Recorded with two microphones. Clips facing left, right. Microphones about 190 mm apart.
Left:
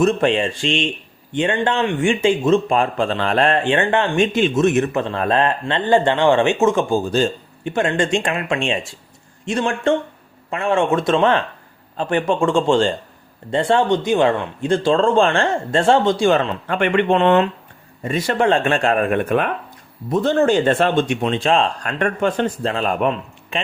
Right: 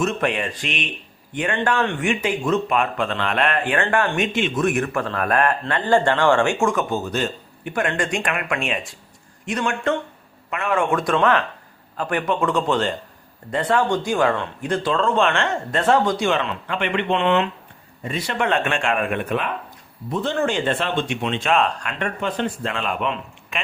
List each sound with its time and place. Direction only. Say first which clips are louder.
0.0 s speech: left 6 dB; 30° left (ahead or behind); by 18.3 s 45° left (ahead or behind)
18.3 s speech: left 4 dB; 30° left (ahead or behind)
22.0 s speech: left 6 dB; 50° left (ahead or behind)
22.6 s speech: left 5 dB; 35° left (ahead or behind)